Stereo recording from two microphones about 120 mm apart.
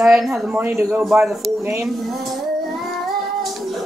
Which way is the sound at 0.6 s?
20° right (ahead or behind).